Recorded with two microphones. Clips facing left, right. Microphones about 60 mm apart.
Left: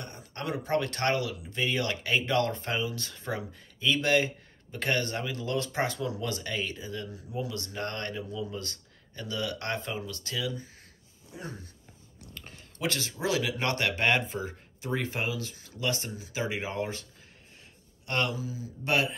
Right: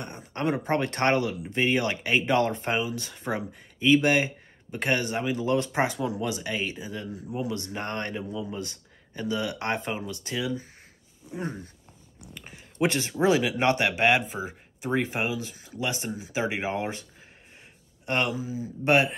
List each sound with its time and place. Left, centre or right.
0.0 s speech: right
12.4 s a sound: centre
13.2 s speech: right
18.0 s speech: right